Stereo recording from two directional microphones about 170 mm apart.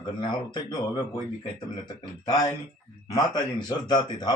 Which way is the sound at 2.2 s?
20° left (ahead or behind).